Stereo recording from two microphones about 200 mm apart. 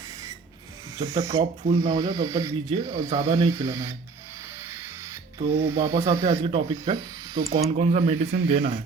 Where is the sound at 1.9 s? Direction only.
20° right (ahead or behind).